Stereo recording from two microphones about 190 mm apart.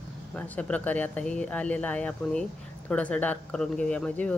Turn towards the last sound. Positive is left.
turn(degrees=5)  # may be behind; listen again after turning